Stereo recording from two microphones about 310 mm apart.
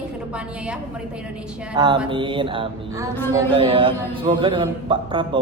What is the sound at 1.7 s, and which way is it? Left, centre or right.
Speech, centre.